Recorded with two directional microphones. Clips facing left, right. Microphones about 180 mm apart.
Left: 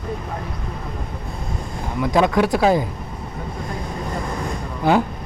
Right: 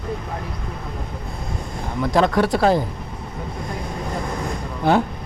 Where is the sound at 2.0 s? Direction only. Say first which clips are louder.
Left 1 dB; 10° left (ahead or behind).